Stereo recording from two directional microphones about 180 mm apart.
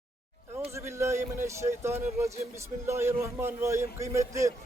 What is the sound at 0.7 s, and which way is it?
A man's voice, 15° right (ahead or behind).